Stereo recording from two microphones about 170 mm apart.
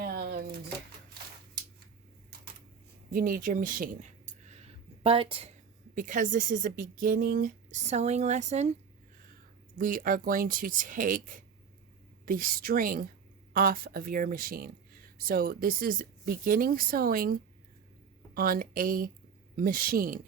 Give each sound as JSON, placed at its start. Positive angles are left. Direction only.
{"t": 0.0, "sound": "a sound", "side_deg": -65}
{"t": 3.1, "sound": "speech", "side_deg": -55}
{"t": 4.3, "sound": "a sound", "side_deg": -40}
{"t": 5.9, "sound": "speech", "side_deg": -50}
{"t": 9.7, "sound": "speech", "side_deg": -55}
{"t": 18.3, "sound": "speech", "side_deg": -60}